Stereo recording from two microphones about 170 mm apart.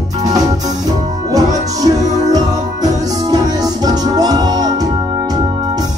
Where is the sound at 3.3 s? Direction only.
20° right (ahead or behind).